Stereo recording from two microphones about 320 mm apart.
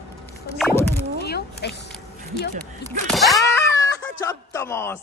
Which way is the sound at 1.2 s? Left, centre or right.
Left.